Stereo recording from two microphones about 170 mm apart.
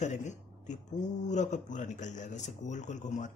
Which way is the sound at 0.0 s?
45° left (ahead or behind).